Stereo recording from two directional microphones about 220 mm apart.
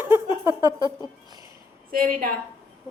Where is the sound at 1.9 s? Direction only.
40° right (ahead or behind).